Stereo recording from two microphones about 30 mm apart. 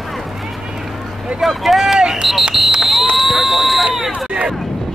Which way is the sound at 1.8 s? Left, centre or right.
Right.